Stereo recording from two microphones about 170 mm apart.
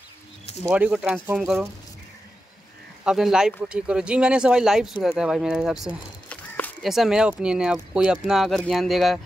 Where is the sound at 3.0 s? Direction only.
5° right (ahead or behind).